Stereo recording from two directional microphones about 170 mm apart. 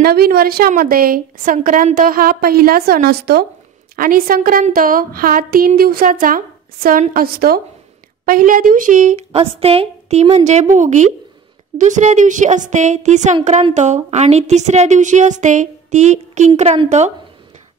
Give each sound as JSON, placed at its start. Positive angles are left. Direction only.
{"t": 0.0, "sound": "a woman's voice", "side_deg": -65}
{"t": 9.4, "sound": "a woman's voice", "side_deg": -35}